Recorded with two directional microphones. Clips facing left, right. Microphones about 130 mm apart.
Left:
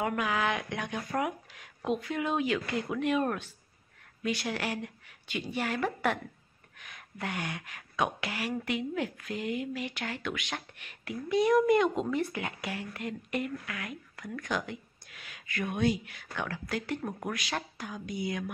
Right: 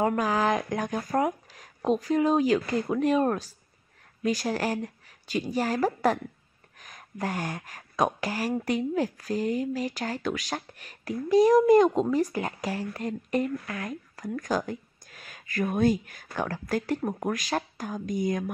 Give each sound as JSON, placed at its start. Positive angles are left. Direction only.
{"t": 0.0, "sound": "speech", "side_deg": -35}